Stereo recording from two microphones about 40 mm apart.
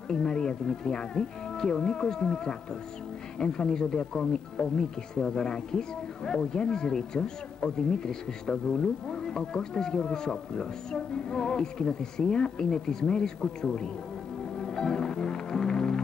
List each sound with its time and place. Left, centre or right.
0.1 s speech: centre
14.7 s music: centre